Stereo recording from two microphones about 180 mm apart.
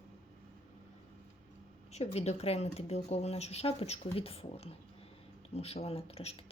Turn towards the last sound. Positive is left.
turn(degrees=35)  # may be behind; listen again after turning